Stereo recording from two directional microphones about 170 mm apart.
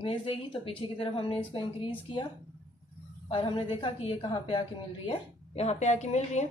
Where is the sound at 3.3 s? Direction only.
30° left (ahead or behind).